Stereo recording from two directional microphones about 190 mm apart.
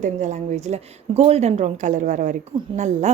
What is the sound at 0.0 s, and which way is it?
A woman's voice, 40° right (ahead or behind).